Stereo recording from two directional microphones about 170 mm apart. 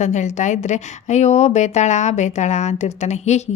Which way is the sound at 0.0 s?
45° left (ahead or behind).